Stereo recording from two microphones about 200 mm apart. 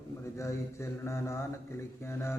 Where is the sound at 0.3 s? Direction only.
15° left (ahead or behind).